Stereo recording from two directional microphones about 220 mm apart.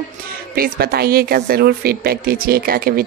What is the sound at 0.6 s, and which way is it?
A woman's voice, 45° right (ahead or behind).